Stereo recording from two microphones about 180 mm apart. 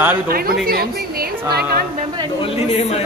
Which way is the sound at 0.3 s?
55° right (ahead or behind).